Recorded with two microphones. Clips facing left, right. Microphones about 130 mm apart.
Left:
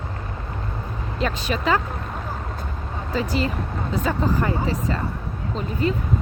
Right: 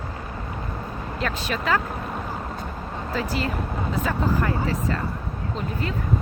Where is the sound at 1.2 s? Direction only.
Centre (ahead or behind).